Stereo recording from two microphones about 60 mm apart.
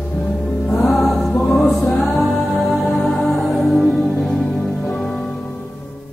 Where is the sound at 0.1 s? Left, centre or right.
Centre.